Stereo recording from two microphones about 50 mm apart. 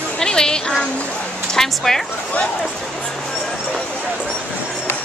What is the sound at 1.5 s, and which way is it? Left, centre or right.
Speech, centre.